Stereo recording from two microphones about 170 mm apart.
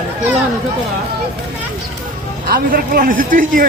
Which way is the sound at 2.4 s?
60° right (ahead or behind).